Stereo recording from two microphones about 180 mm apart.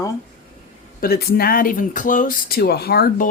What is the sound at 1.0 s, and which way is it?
Speech, 60° left (ahead or behind).